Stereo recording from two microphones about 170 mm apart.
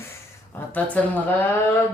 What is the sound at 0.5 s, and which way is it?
Speech, 10° left (ahead or behind).